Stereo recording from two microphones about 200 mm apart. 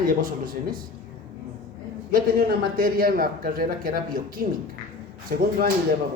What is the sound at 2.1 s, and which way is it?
A man's voice, 45° right (ahead or behind).